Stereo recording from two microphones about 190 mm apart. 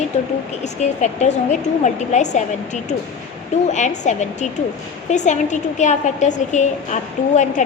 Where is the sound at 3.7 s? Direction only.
40° left (ahead or behind).